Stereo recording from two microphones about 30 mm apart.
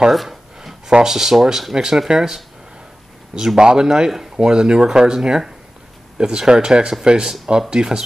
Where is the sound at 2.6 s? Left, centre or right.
Right.